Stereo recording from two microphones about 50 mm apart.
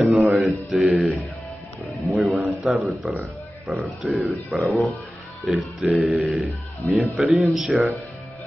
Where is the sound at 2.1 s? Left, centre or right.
Centre.